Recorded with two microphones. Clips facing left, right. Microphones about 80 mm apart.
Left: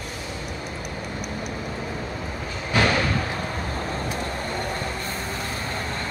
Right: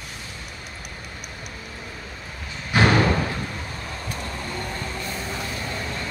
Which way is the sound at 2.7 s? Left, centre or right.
Right.